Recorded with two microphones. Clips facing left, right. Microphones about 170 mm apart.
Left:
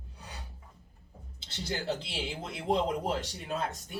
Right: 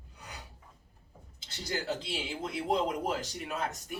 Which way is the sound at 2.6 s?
30° left (ahead or behind).